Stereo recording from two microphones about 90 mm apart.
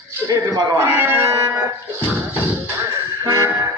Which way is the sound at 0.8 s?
25° right (ahead or behind).